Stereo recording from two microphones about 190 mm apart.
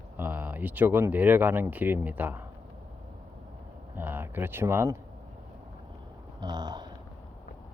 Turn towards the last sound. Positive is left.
turn(degrees=-20)  # may be behind; listen again after turning